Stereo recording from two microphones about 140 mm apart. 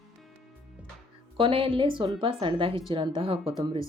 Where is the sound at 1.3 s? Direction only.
35° right (ahead or behind).